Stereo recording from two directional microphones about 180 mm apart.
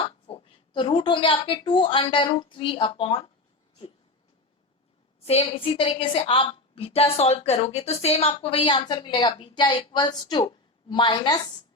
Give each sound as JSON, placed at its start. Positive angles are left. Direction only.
{"t": 0.3, "sound": "a woman's voice", "side_deg": 30}
{"t": 5.2, "sound": "a woman's voice", "side_deg": 35}